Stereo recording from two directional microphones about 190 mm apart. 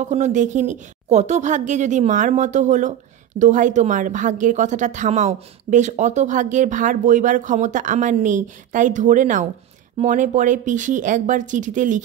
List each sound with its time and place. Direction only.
0.0 s a woman's voice: 40° right (ahead or behind)